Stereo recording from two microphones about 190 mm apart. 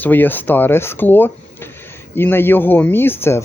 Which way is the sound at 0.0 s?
10° left (ahead or behind).